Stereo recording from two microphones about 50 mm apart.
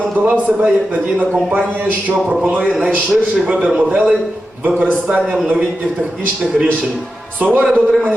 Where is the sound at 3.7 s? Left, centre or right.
Centre.